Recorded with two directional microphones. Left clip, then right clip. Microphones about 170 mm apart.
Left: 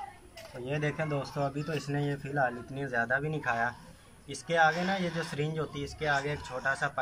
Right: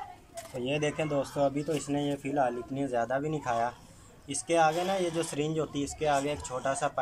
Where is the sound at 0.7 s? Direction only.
10° right (ahead or behind).